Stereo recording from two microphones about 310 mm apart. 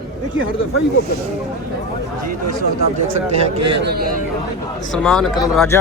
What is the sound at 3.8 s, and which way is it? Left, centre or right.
Speech, right.